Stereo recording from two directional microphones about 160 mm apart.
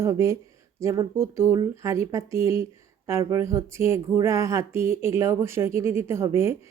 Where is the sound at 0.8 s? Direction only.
20° right (ahead or behind).